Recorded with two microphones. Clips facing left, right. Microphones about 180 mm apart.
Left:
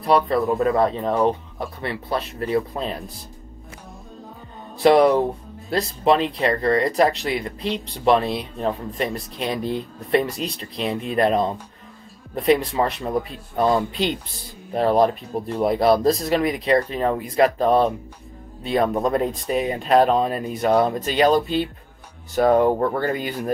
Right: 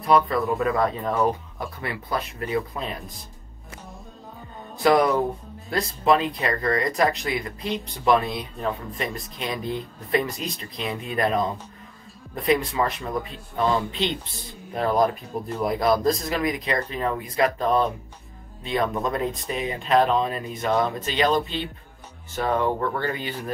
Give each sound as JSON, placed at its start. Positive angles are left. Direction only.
{"t": 0.0, "sound": "speech", "side_deg": 35}
{"t": 4.8, "sound": "speech", "side_deg": 30}
{"t": 6.4, "sound": "speech", "side_deg": 30}
{"t": 10.9, "sound": "speech", "side_deg": 0}
{"t": 11.1, "sound": "speech", "side_deg": 30}
{"t": 12.7, "sound": "speech", "side_deg": 40}